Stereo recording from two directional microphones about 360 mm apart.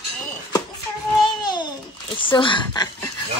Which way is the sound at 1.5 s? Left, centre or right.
Centre.